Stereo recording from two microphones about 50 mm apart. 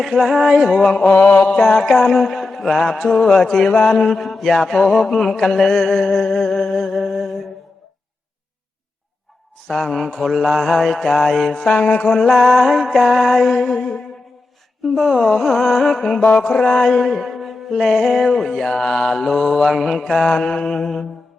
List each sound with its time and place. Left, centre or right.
0.0 s music: centre
1.0 s music: left; by 3.1 s centre
3.1 s a sound: centre
3.8 s music: centre
9.6 s music: centre
10.7 s music: centre
11.9 s music: left
12.3 s music: centre
15.2 s music: centre
16.2 s a sound: centre
17.1 s music: centre